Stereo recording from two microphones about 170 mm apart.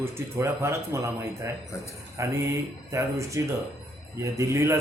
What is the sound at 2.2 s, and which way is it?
Speech, 15° right (ahead or behind).